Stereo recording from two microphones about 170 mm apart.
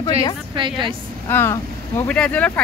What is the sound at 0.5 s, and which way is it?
Speech, 30° right (ahead or behind).